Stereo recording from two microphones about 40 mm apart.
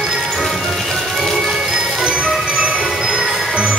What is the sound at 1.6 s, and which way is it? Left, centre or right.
Music, centre.